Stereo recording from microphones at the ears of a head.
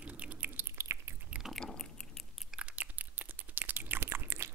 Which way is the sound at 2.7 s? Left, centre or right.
Right.